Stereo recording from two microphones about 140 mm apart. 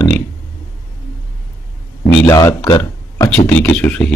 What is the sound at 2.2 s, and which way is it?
Speech, 25° left (ahead or behind).